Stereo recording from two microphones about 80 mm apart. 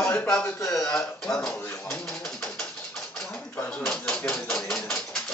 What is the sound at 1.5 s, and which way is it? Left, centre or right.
Speech, left.